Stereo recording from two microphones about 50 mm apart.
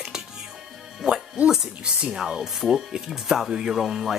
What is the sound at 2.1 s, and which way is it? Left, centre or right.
Speech, centre.